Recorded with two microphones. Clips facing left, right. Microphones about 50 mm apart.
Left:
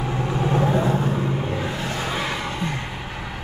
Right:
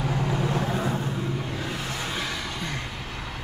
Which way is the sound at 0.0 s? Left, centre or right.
Left.